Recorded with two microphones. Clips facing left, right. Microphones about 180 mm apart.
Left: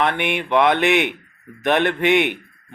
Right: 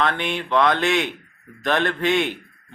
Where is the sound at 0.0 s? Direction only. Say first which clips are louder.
Left 2 dB; 20° left (ahead or behind).